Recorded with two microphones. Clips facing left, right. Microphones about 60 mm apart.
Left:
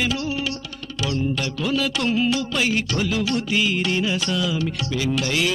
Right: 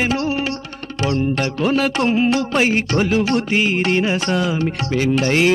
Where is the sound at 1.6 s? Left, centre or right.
Right.